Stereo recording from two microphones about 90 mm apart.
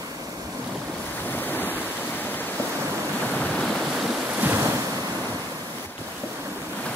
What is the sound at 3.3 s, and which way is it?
Waves, 10° left (ahead or behind).